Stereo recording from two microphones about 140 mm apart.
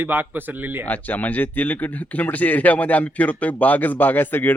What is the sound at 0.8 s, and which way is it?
Speech, 10° left (ahead or behind).